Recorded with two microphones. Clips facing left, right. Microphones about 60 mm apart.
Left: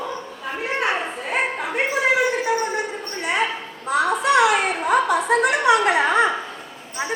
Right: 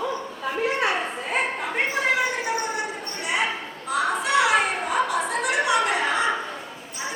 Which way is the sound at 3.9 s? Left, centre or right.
Left.